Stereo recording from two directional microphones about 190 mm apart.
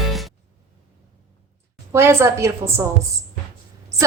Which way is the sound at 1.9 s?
15° right (ahead or behind).